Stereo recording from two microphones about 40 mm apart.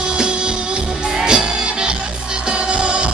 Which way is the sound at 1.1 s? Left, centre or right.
Centre.